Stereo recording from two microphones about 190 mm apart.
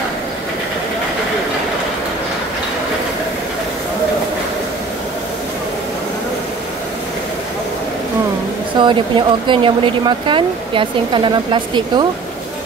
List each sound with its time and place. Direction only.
8.7 s speech: 25° right (ahead or behind)